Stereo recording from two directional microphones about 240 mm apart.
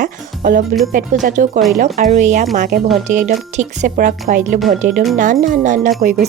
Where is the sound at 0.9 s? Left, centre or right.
Right.